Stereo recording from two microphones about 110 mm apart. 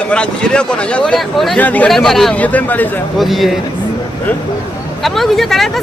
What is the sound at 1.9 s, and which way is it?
Speech, centre (ahead or behind).